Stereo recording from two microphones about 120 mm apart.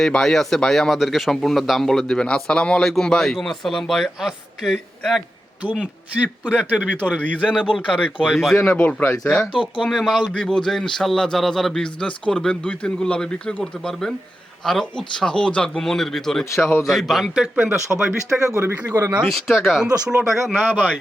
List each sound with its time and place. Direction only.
0.0 s speech: 5° left (ahead or behind)
7.2 s speech: 10° left (ahead or behind)
8.3 s speech: centre (ahead or behind)
18.4 s speech: 25° right (ahead or behind)
18.8 s speech: 10° right (ahead or behind)
19.2 s speech: 5° left (ahead or behind)
20.7 s speech: 15° right (ahead or behind)